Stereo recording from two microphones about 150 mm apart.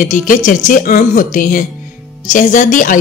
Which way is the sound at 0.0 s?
60° left (ahead or behind).